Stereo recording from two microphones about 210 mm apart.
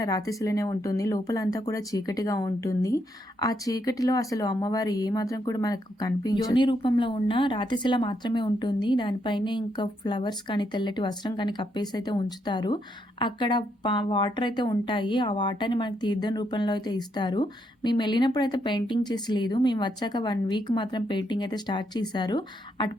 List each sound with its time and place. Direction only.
0.0 s speech: 15° left (ahead or behind)